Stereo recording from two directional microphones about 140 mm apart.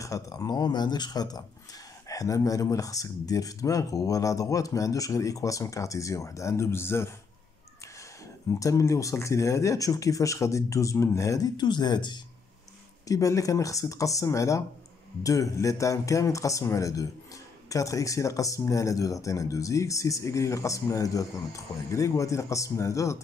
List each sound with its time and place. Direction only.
0.0 s speech: 25° left (ahead or behind)
8.5 s speech: 25° left (ahead or behind)